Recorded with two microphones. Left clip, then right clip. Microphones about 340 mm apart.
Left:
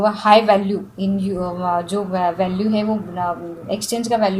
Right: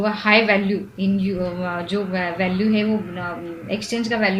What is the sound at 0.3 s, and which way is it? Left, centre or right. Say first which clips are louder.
A woman's voice: left 3 dB; left.